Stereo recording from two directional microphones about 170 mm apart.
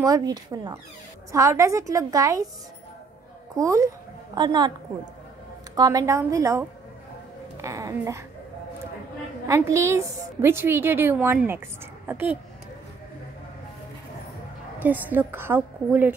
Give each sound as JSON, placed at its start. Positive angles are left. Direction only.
{"t": 0.0, "sound": "a woman's voice", "side_deg": -20}
{"t": 3.5, "sound": "a woman's voice", "side_deg": -20}
{"t": 5.8, "sound": "a woman's voice", "side_deg": -20}
{"t": 7.6, "sound": "speech", "side_deg": -20}
{"t": 9.5, "sound": "a woman's voice", "side_deg": -15}
{"t": 14.8, "sound": "a woman's voice", "side_deg": -10}